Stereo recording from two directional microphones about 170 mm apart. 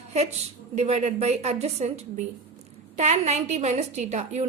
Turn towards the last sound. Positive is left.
turn(degrees=-40)  # may be behind; listen again after turning